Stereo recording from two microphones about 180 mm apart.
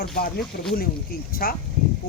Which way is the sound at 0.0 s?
60° left (ahead or behind).